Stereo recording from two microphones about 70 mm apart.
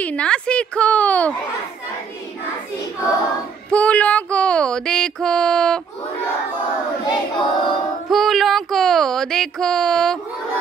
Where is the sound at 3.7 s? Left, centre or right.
Centre.